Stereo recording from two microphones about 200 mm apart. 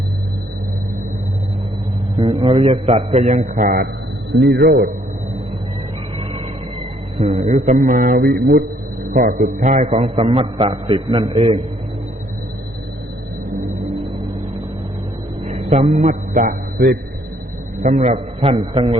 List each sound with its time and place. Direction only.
2.1 s a man's voice: 25° right (ahead or behind); by 3.8 s 45° right (ahead or behind)
4.4 s a man's voice: 55° right (ahead or behind)
7.2 s a man's voice: 35° right (ahead or behind); by 8.6 s 50° right (ahead or behind)
9.1 s a man's voice: 40° right (ahead or behind)
15.4 s a man's voice: 35° right (ahead or behind)